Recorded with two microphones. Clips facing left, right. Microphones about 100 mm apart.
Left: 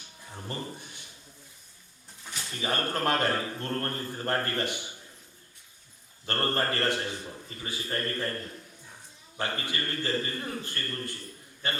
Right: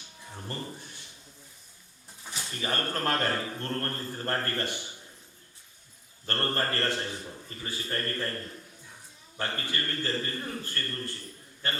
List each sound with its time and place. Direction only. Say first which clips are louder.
0.3 s a sound: left 1 dB; 5° left (ahead or behind)
0.8 s a sound: even; 15° left (ahead or behind)
2.2 s pigeon: right 1 dB; 15° right (ahead or behind)
2.5 s a man's voice: left 2 dB; 15° left (ahead or behind)
6.2 s a man's voice: left 2 dB; 15° left (ahead or behind)
9.4 s a man's voice: left 1 dB; 15° left (ahead or behind)